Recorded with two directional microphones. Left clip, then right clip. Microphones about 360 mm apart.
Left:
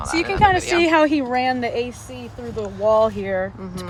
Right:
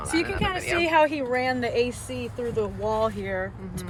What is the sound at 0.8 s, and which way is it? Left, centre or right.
Speech, left.